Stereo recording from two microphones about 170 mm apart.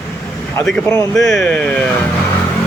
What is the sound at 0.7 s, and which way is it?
Speech, 5° left (ahead or behind).